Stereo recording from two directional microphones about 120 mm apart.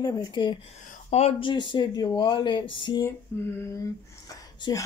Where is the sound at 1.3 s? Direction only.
45° left (ahead or behind).